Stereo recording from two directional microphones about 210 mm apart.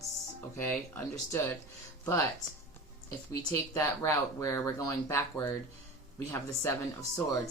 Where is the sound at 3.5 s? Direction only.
15° left (ahead or behind).